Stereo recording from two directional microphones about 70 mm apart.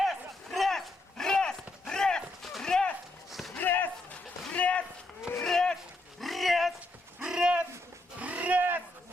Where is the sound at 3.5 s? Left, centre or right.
Left.